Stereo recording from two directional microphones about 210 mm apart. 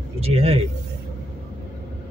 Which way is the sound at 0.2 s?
30° right (ahead or behind).